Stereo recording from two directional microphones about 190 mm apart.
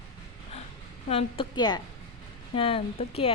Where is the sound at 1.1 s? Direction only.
25° left (ahead or behind).